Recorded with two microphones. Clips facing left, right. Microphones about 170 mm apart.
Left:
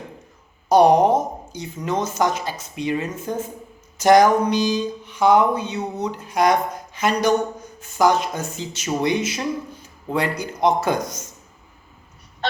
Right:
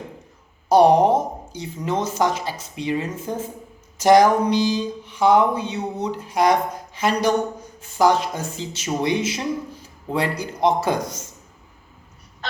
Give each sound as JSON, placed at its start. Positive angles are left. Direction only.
{"t": 0.7, "sound": "a woman's voice", "side_deg": -25}